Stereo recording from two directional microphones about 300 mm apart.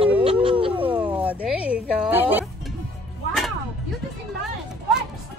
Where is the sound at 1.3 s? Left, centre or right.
Centre.